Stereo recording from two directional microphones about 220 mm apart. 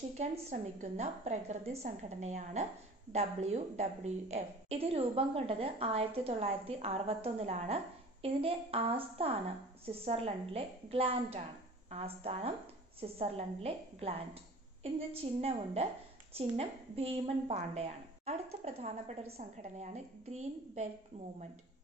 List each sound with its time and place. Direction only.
0.2 s a woman's voice: 30° right (ahead or behind)